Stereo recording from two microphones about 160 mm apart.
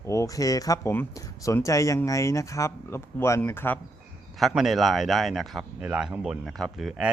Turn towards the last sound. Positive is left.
turn(degrees=0)  # may be behind; listen again after turning